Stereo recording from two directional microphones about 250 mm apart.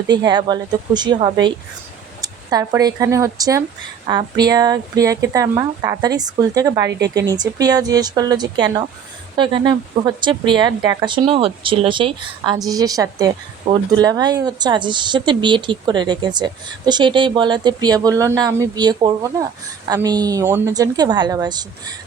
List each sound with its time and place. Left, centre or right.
0.1 s speech: centre